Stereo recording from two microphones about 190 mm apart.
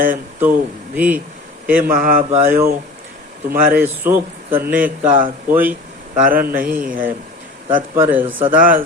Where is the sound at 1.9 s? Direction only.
50° right (ahead or behind).